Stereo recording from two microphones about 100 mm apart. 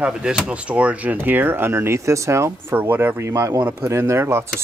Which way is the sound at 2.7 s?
20° right (ahead or behind).